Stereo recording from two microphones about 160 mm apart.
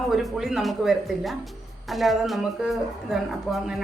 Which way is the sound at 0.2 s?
Centre (ahead or behind).